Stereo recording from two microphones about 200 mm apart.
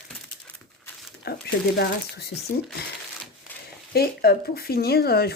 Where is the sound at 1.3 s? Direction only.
50° left (ahead or behind).